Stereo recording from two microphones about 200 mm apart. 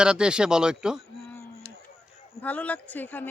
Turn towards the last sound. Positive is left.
turn(degrees=10)  # may be behind; listen again after turning